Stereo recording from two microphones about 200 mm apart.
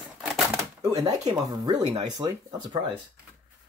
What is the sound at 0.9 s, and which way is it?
Speech, 20° right (ahead or behind).